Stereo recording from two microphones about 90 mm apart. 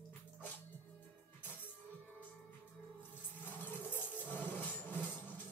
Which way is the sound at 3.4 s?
20° left (ahead or behind).